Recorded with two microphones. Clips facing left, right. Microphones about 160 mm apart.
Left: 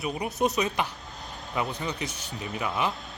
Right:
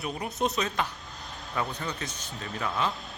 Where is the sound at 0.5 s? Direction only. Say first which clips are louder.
Left 2 dB; 15° left (ahead or behind).